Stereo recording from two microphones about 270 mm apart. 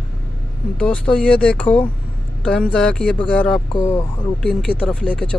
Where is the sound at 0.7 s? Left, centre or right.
Centre.